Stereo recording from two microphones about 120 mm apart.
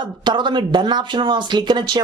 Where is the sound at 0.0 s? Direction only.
40° right (ahead or behind).